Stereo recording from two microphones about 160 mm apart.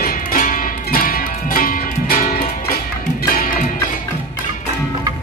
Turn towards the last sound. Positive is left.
turn(degrees=65)  # may be behind; listen again after turning